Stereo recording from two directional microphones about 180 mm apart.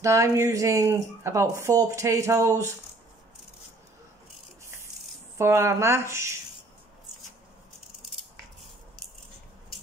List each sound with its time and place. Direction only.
0.0 s speech: 15° right (ahead or behind)
5.4 s speech: 15° right (ahead or behind)